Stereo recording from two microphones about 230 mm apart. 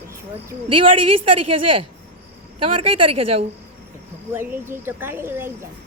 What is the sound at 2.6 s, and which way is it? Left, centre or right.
Speech, right.